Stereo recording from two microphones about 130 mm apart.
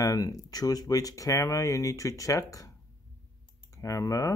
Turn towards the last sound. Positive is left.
turn(degrees=25)  # may be behind; listen again after turning